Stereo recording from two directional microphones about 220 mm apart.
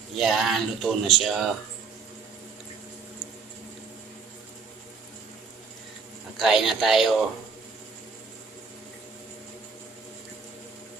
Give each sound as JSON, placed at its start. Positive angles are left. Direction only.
{"t": 0.2, "sound": "speech", "side_deg": 0}
{"t": 6.3, "sound": "speech", "side_deg": 0}